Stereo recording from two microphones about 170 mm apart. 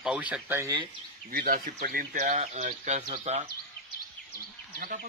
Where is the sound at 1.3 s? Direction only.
60° right (ahead or behind); by 3.5 s 40° right (ahead or behind).